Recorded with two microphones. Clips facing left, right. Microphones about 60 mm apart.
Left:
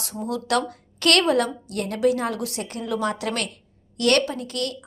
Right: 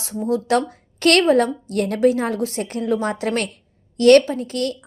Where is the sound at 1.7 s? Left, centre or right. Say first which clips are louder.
Right 4 dB; right.